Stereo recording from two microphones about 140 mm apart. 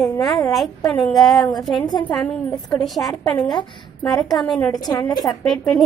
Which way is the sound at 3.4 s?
30° left (ahead or behind).